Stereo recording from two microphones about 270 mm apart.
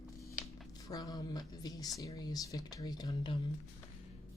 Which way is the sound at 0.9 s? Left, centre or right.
Centre.